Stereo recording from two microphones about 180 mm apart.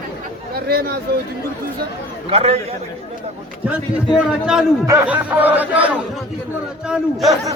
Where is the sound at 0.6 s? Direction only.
60° right (ahead or behind).